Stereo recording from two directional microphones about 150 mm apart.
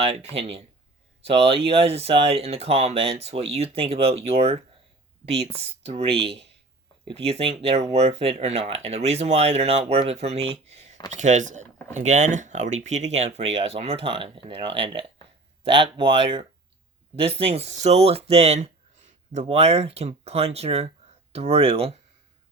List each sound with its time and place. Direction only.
0.0 s speech: 45° right (ahead or behind)
5.8 s speech: 40° right (ahead or behind)
7.1 s speech: 40° right (ahead or behind)